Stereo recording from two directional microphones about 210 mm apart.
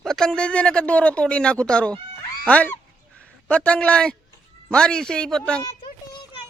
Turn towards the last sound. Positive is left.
turn(degrees=20)  # may be behind; listen again after turning